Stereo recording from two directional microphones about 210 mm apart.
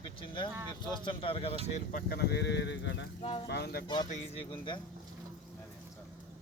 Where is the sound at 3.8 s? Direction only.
20° left (ahead or behind).